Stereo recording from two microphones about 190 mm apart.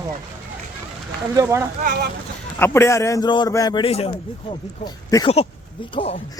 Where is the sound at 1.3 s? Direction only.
15° right (ahead or behind).